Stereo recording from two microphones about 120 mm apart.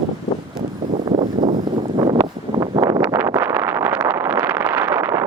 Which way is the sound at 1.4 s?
40° right (ahead or behind).